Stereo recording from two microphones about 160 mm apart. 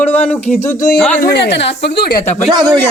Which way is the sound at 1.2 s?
85° left.